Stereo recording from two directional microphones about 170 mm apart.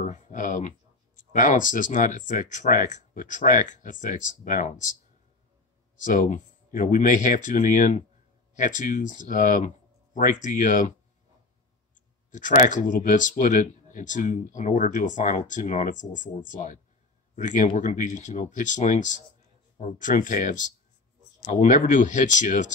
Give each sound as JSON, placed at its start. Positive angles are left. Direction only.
{"t": 0.0, "sound": "speech", "side_deg": 50}
{"t": 6.0, "sound": "speech", "side_deg": 50}
{"t": 12.3, "sound": "speech", "side_deg": 50}